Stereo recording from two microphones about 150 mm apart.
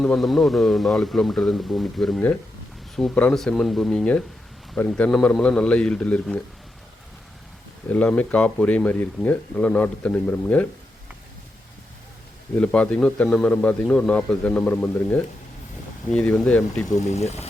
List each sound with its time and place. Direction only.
0.0 s a man's voice: 5° left (ahead or behind)
7.9 s speech: 10° left (ahead or behind)
12.5 s speech: 10° left (ahead or behind)
17.0 s speech: 50° left (ahead or behind)